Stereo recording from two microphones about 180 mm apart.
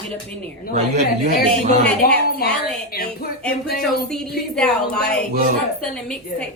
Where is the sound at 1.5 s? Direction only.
35° right (ahead or behind).